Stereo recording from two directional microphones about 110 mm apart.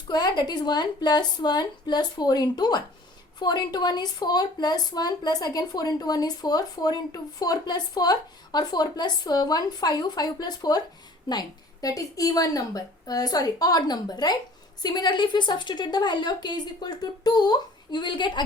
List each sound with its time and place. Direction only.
0.1 s a woman's voice: 40° left (ahead or behind)